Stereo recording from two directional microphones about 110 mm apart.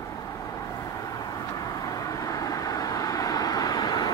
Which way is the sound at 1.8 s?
30° left (ahead or behind).